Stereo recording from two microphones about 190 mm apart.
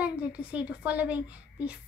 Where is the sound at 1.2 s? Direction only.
5° right (ahead or behind).